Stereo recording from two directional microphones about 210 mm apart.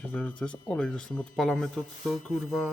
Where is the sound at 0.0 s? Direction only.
5° left (ahead or behind).